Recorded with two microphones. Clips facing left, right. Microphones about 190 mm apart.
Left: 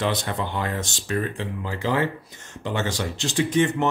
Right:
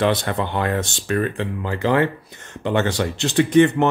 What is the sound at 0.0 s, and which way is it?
Speech, 60° right (ahead or behind).